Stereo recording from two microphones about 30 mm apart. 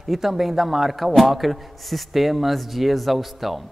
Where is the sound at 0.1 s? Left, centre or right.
Centre.